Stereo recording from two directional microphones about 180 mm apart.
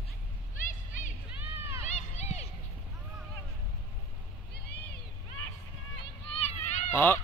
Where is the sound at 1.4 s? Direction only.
15° right (ahead or behind).